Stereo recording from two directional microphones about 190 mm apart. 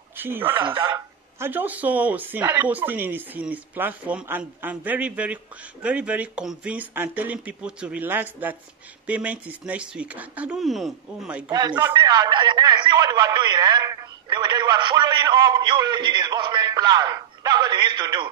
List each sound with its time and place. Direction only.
0.2 s speech: 10° right (ahead or behind)
0.6 s speech: 25° right (ahead or behind); by 11.5 s 5° right (ahead or behind)
11.5 s a man's voice: 20° right (ahead or behind)